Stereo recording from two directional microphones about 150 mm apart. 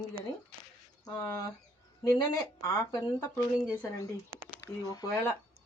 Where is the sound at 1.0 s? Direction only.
20° left (ahead or behind).